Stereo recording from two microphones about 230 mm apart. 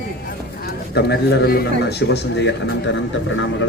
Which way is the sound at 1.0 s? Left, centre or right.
Left.